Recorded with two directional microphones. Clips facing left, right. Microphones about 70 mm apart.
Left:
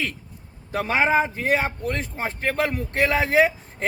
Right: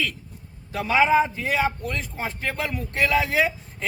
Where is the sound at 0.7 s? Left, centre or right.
Left.